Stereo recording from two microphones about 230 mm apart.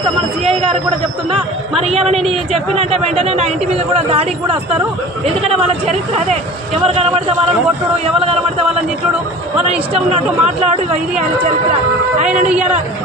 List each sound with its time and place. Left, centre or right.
0.4 s speech: right
2.0 s speech: right
5.2 s speech: right
6.8 s speech: right
9.9 s speech: right
12.2 s a man's voice: right